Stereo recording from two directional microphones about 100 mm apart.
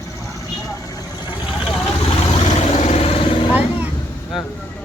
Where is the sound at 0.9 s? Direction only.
45° left (ahead or behind).